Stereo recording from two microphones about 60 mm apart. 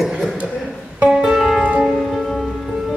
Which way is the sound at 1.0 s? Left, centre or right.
Centre.